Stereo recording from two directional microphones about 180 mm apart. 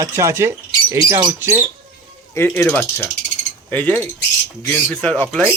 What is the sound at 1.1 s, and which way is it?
Speech, 25° right (ahead or behind).